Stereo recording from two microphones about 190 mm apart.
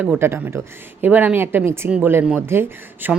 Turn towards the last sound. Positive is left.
turn(degrees=-10)  # may be behind; listen again after turning